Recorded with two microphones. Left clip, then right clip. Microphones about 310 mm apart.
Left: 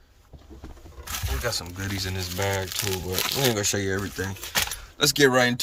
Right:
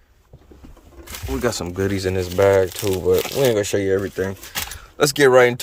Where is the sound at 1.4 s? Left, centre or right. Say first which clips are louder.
Right 10 dB; right.